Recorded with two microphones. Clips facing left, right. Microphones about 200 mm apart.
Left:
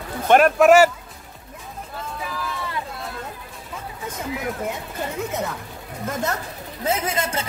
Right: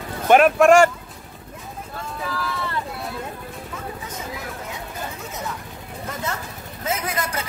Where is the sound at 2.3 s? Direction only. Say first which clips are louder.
Right 3 dB; 15° left (ahead or behind).